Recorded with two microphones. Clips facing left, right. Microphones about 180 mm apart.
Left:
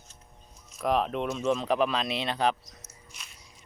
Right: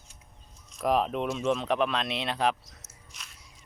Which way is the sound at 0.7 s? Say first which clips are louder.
Right 1 dB; centre (ahead or behind).